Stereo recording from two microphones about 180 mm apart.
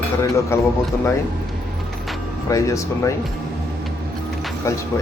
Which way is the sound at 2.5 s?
20° left (ahead or behind).